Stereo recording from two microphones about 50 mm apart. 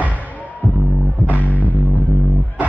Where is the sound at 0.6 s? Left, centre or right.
Right.